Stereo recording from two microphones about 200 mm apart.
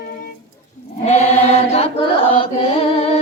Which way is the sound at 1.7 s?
30° left (ahead or behind).